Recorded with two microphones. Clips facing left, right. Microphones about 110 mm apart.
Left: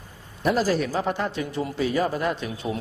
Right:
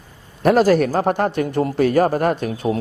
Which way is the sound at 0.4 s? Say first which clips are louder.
Right 8 dB; 60° right (ahead or behind).